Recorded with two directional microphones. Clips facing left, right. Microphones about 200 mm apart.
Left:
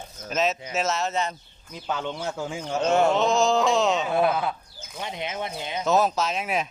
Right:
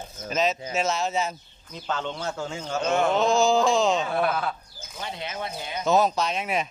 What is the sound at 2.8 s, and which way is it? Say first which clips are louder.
Speech: left 3 dB; 35° left (ahead or behind).